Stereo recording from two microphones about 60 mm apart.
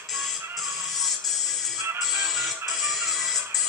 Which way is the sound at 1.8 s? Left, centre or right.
Right.